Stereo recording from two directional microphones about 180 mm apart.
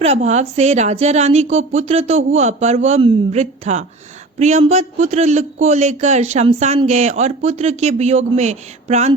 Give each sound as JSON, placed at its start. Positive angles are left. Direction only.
{"t": 0.0, "sound": "a man's voice", "side_deg": -35}